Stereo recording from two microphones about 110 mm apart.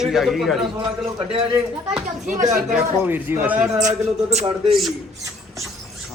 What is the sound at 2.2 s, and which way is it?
Speech, 90° right.